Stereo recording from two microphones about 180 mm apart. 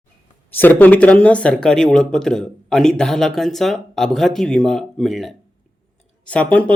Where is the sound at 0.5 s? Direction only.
10° left (ahead or behind).